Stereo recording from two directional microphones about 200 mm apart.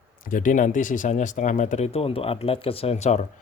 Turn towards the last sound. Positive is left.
turn(degrees=35)  # may be behind; listen again after turning